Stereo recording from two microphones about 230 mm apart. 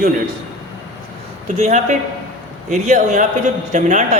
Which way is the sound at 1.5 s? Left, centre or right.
Right.